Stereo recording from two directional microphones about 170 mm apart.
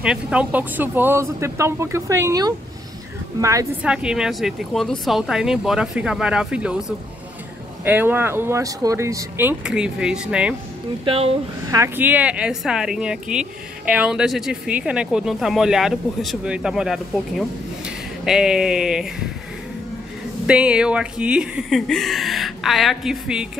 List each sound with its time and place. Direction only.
0.0 s a woman's voice: 5° right (ahead or behind)
3.8 s speech: 5° right (ahead or behind)
7.8 s speech: 10° right (ahead or behind)
11.1 s speech: 35° right (ahead or behind)
11.7 s speech: 15° right (ahead or behind)
20.4 s speech: 5° right (ahead or behind)